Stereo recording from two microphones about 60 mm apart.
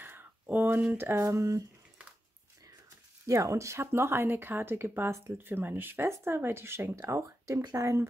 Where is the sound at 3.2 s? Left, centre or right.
Right.